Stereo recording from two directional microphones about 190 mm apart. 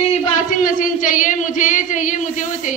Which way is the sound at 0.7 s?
45° left (ahead or behind).